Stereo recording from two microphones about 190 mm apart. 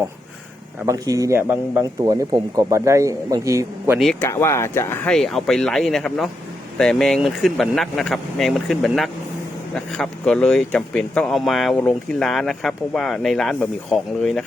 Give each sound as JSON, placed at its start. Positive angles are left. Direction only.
{"t": 0.9, "sound": "a man's voice", "side_deg": -20}
{"t": 3.9, "sound": "speech", "side_deg": 0}
{"t": 4.2, "sound": "speech", "side_deg": 15}
{"t": 5.1, "sound": "speech", "side_deg": 0}